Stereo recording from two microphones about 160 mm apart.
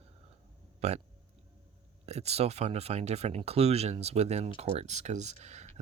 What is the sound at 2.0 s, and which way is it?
Speech, 40° right (ahead or behind).